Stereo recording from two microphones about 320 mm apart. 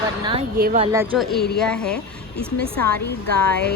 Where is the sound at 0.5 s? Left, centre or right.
Right.